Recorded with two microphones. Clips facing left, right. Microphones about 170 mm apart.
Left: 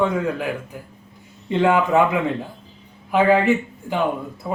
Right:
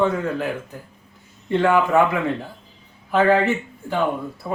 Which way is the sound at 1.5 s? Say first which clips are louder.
Even; 20° left (ahead or behind).